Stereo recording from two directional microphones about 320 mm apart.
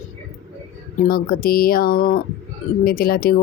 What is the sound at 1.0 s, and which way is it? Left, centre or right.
Speech, left.